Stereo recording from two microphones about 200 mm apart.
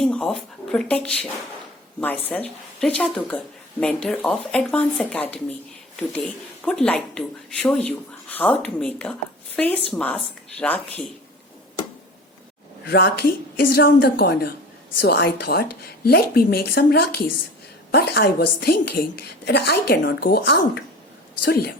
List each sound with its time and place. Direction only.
0.0 s speech: 5° left (ahead or behind)
12.9 s a woman's voice: 50° left (ahead or behind)